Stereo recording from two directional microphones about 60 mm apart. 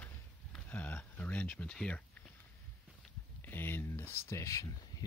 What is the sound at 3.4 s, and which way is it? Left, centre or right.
Speech, left.